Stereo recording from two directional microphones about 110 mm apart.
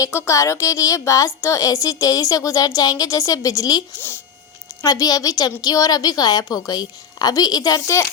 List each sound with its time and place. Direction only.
0.0 s a woman's voice: 25° left (ahead or behind)